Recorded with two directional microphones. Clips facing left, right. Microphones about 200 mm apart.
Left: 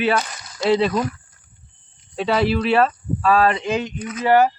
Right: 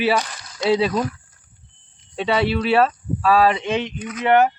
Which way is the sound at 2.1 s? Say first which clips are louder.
Left 1 dB; centre (ahead or behind).